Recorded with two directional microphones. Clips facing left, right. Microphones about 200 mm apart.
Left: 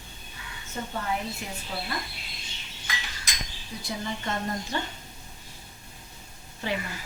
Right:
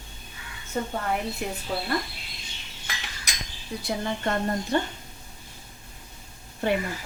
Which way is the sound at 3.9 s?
60° right (ahead or behind).